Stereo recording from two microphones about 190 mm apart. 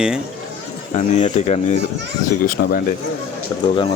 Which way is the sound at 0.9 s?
40° left (ahead or behind).